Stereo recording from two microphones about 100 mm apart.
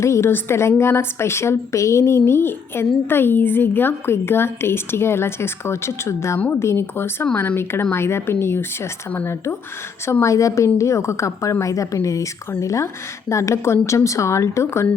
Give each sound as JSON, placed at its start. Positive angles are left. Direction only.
{"t": 0.0, "sound": "a woman's voice", "side_deg": 30}